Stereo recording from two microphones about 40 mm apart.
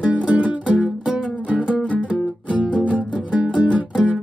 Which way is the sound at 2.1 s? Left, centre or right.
Right.